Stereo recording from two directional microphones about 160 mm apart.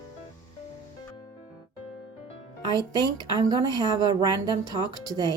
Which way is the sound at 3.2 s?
25° right (ahead or behind).